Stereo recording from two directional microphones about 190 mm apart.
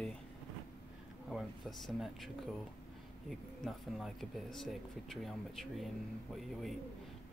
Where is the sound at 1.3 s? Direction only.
Centre (ahead or behind).